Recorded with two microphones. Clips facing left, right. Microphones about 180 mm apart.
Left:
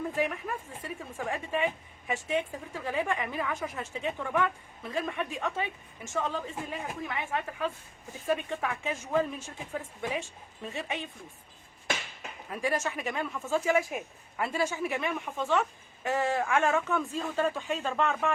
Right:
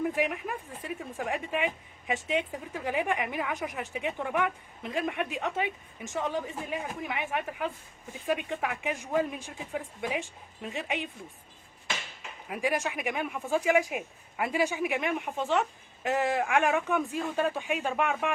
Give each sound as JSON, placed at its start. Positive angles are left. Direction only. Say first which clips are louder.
{"t": 0.1, "sound": "speech", "louder": "right 1 dB", "side_deg": -15}
{"t": 12.5, "sound": "speech", "louder": "right 1 dB", "side_deg": -15}